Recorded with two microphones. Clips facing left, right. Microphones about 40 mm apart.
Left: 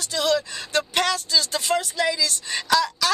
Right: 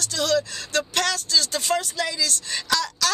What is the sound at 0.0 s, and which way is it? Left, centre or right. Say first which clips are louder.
A woman's voice: even; centre.